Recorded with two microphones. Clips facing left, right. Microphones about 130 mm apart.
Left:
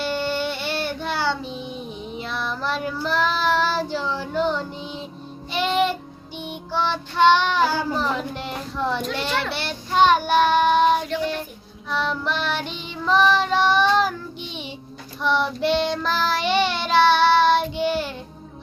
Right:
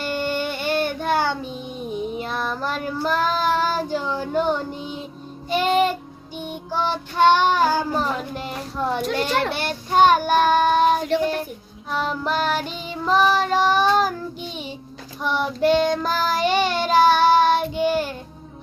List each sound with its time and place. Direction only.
0.0 s music: 45° right (ahead or behind)
2.1 s child singing: 45° right (ahead or behind)
4.0 s speech: 15° right (ahead or behind)
4.4 s child singing: 50° right (ahead or behind)
8.4 s speech: 10° right (ahead or behind)
9.1 s child singing: 45° right (ahead or behind)